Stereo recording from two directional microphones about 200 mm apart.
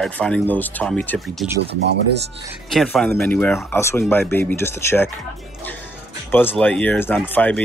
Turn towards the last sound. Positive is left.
turn(degrees=10)  # may be behind; listen again after turning